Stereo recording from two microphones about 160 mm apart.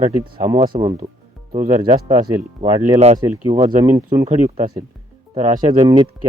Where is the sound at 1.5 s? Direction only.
45° right (ahead or behind).